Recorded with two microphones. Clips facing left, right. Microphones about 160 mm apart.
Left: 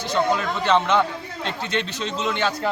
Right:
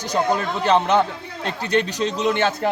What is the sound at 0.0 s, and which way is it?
A man's voice, 40° right (ahead or behind).